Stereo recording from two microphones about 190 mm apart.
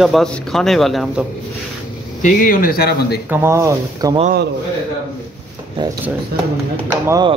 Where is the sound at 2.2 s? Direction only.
50° left (ahead or behind).